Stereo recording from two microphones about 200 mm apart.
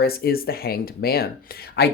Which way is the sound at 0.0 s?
50° left (ahead or behind).